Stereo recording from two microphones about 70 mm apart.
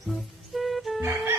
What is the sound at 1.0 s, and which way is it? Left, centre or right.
Music, right.